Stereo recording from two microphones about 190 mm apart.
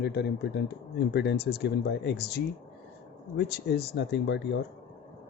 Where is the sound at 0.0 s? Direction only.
60° left (ahead or behind).